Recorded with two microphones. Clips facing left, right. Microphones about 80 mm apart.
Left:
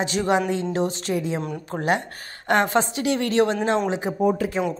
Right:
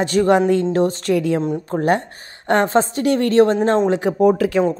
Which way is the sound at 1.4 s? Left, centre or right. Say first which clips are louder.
Right 7 dB; right.